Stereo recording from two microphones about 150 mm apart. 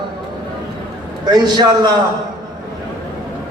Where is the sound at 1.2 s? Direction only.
25° right (ahead or behind).